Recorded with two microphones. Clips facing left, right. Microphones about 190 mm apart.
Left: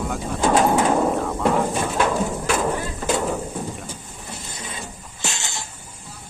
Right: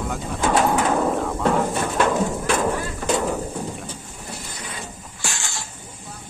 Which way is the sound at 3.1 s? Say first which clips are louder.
Right 1 dB; 5° left (ahead or behind).